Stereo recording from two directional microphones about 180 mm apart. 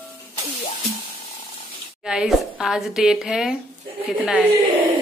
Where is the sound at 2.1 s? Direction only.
5° right (ahead or behind).